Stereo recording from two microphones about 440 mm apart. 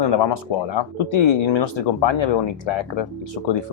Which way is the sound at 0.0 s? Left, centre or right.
Left.